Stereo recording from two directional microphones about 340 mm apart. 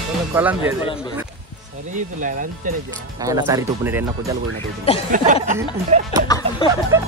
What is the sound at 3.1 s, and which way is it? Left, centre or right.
Speech, centre.